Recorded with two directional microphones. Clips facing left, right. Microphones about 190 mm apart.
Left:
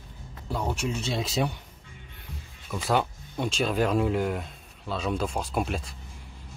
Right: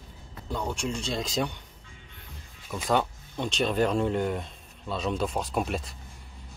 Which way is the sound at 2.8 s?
5° left (ahead or behind).